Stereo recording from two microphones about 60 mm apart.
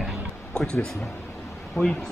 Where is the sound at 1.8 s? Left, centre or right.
Left.